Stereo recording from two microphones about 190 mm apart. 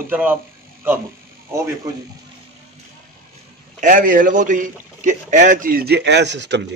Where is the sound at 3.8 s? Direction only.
45° right (ahead or behind); by 6.8 s 65° right (ahead or behind).